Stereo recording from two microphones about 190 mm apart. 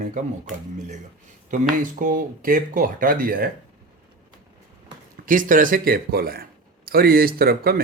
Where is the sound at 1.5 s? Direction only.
45° right (ahead or behind).